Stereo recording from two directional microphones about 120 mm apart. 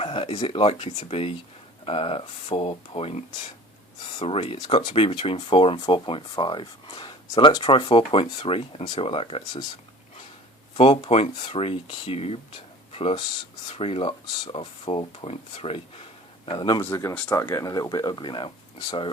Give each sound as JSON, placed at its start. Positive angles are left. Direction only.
{"t": 0.0, "sound": "a sound", "side_deg": 50}
{"t": 0.4, "sound": "speech", "side_deg": 50}
{"t": 10.8, "sound": "speech", "side_deg": 55}
{"t": 12.9, "sound": "a sound", "side_deg": 55}
{"t": 13.7, "sound": "speech", "side_deg": 55}
{"t": 16.5, "sound": "speech", "side_deg": 40}
{"t": 16.8, "sound": "speech", "side_deg": 20}